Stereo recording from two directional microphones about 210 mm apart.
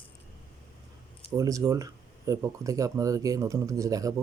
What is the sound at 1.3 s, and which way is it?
Speech, 15° right (ahead or behind).